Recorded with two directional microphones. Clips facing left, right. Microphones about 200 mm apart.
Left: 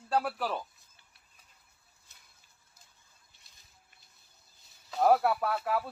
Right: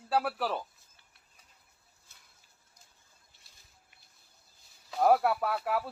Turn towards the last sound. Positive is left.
turn(degrees=-5)  # may be behind; listen again after turning